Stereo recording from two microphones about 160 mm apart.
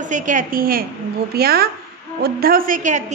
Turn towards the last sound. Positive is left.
turn(degrees=-55)  # may be behind; listen again after turning